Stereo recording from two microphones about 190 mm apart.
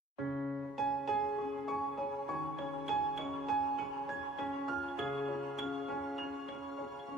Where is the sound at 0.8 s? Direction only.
Centre (ahead or behind).